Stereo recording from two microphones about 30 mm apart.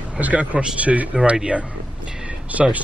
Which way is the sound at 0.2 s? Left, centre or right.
Right.